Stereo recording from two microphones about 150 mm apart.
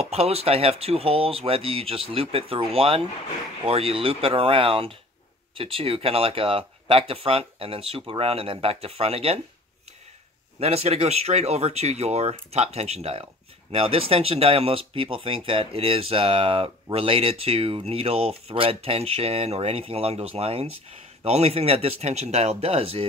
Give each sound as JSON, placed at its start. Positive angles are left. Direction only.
{"t": 0.0, "sound": "speech", "side_deg": -45}
{"t": 10.6, "sound": "speech", "side_deg": -45}